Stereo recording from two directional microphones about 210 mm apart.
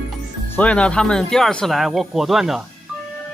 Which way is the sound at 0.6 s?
5° left (ahead or behind).